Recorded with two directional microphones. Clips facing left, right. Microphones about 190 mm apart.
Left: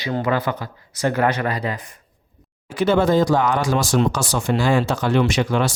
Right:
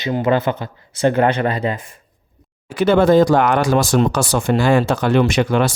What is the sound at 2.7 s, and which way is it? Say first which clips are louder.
Speech: right 4 dB; 60° right (ahead or behind).